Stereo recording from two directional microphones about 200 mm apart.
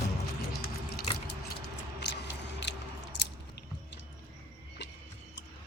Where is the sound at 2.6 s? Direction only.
60° left (ahead or behind).